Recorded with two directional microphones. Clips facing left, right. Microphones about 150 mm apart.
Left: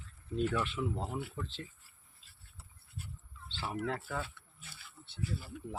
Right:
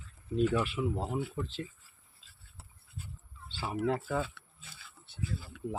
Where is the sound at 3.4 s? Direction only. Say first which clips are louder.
Right 5 dB; 10° right (ahead or behind).